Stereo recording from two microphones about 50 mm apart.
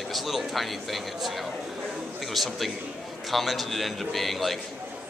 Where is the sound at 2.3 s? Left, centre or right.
Centre.